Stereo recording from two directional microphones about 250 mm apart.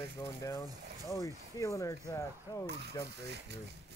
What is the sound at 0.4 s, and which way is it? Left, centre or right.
Speech, centre.